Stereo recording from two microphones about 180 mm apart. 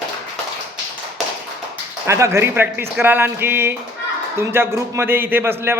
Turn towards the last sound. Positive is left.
turn(degrees=-10)  # may be behind; listen again after turning